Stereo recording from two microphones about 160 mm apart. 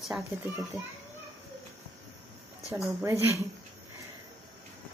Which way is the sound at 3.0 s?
15° right (ahead or behind).